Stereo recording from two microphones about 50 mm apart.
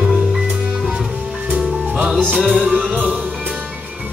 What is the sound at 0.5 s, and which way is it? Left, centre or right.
Music, centre.